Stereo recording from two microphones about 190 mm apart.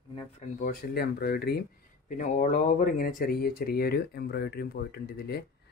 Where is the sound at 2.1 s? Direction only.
40° left (ahead or behind).